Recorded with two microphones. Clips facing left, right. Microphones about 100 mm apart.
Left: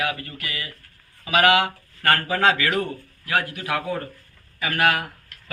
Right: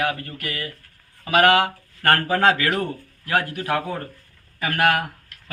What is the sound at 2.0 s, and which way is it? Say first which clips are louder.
Speech: right 2 dB; 50° right (ahead or behind).